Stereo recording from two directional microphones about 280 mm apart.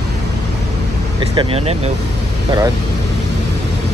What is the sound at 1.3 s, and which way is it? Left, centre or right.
Speech, centre.